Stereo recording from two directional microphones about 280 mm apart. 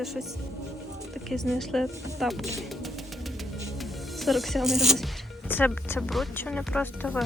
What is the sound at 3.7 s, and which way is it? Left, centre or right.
Speech, centre.